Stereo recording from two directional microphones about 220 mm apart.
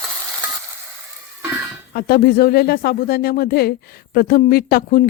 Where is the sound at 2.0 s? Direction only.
45° left (ahead or behind).